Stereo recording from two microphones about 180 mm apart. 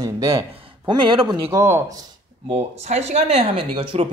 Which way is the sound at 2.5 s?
40° right (ahead or behind).